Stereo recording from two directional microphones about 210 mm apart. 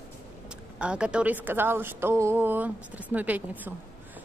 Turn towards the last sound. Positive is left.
turn(degrees=-10)  # may be behind; listen again after turning